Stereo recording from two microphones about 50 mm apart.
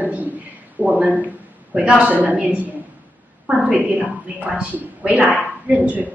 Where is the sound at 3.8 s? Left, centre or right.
Right.